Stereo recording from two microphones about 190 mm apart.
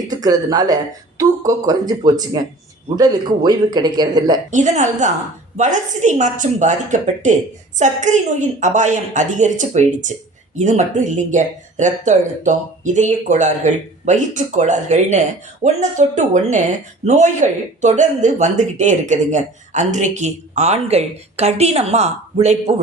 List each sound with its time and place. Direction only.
0.1 s speech: 20° right (ahead or behind)
4.5 s a woman's voice: 40° right (ahead or behind)